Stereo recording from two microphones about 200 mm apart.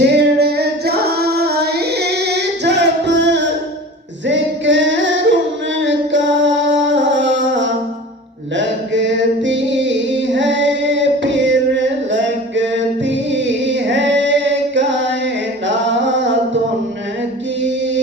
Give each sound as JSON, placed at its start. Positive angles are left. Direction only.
{"t": 0.1, "sound": "singing", "side_deg": -55}
{"t": 4.3, "sound": "female singing", "side_deg": -65}
{"t": 5.8, "sound": "music", "side_deg": -65}
{"t": 8.5, "sound": "a sound", "side_deg": -65}
{"t": 15.6, "sound": "a capella", "side_deg": -65}